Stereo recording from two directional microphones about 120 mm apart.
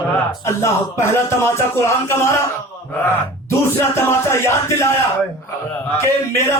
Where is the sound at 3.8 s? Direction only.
25° left (ahead or behind).